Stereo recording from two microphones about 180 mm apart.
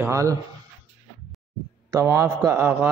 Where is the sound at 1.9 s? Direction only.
15° right (ahead or behind).